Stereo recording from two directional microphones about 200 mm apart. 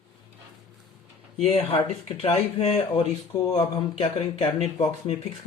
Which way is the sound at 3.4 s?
20° left (ahead or behind).